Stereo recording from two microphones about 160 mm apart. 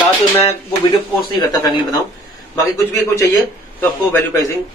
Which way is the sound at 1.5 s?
25° left (ahead or behind).